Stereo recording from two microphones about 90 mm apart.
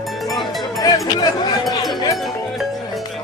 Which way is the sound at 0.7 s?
45° left (ahead or behind).